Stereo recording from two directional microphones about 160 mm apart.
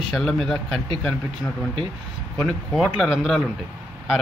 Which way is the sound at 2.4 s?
Centre (ahead or behind).